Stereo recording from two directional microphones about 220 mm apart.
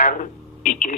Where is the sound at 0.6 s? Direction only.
40° left (ahead or behind).